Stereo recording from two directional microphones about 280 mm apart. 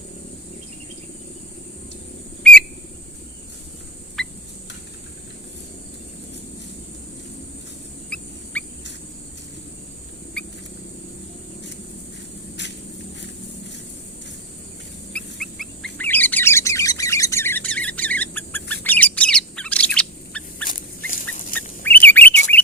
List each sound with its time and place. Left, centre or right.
2.4 s whistle: centre
4.2 s a sound: centre
8.1 s a sound: centre
15.1 s bird: centre
21.1 s dog: left
21.8 s bird: centre